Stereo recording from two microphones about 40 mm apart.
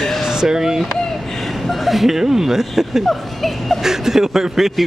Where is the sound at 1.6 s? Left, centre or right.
Centre.